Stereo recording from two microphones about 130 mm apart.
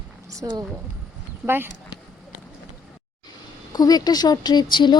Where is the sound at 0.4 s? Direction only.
25° right (ahead or behind).